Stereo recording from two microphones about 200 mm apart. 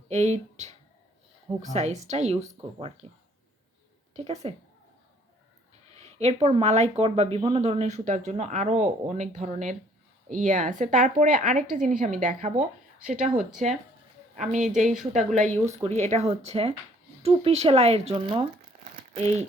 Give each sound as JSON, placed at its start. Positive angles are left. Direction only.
{"t": 0.1, "sound": "speech", "side_deg": -35}
{"t": 6.1, "sound": "speech", "side_deg": -30}
{"t": 13.3, "sound": "speech", "side_deg": 0}
{"t": 14.3, "sound": "speech", "side_deg": -40}